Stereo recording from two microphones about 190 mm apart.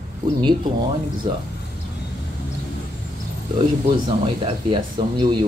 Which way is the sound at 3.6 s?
25° right (ahead or behind).